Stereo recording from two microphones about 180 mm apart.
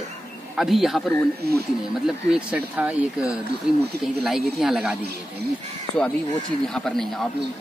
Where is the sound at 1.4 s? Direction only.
60° right (ahead or behind).